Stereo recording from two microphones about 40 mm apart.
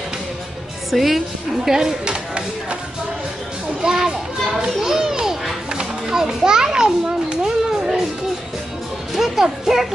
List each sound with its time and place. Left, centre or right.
0.9 s a woman's voice: centre
2.0 s a sound: right
3.8 s children playing: centre
7.6 s children playing: centre
9.1 s music: centre